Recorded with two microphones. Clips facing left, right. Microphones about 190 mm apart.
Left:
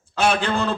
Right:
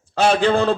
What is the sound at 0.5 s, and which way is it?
Speech, 55° right (ahead or behind).